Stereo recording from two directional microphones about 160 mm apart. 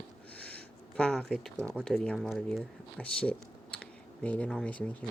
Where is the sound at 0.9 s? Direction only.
5° left (ahead or behind).